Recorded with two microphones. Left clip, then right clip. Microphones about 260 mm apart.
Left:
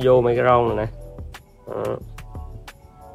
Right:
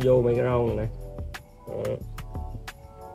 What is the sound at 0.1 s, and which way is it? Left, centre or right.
Speech, left.